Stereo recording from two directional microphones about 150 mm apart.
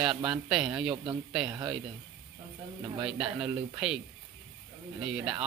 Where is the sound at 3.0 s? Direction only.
5° right (ahead or behind).